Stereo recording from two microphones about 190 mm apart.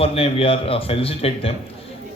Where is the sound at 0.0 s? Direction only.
30° left (ahead or behind).